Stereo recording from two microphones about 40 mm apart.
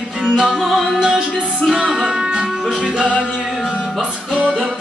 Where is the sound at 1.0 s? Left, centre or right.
Centre.